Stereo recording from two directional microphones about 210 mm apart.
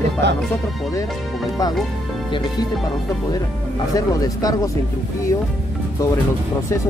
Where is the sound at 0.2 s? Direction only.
55° right (ahead or behind).